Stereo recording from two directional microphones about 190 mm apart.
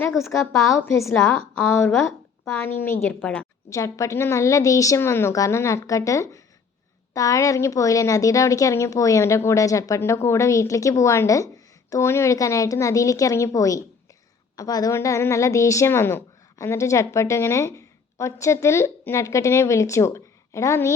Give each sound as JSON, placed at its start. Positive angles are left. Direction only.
{"t": 0.2, "sound": "a woman's voice", "side_deg": 15}
{"t": 2.6, "sound": "a woman's voice", "side_deg": 10}